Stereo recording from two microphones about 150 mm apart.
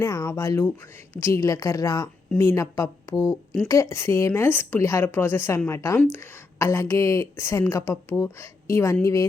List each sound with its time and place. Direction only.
0.0 s a woman's voice: 20° left (ahead or behind)